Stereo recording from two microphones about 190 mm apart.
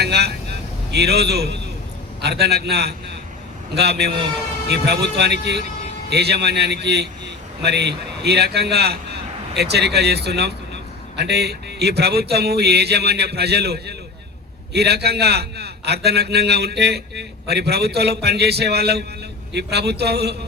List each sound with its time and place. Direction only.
0.0 s vehicle: 60° right (ahead or behind)
0.9 s a man's voice: 60° right (ahead or behind)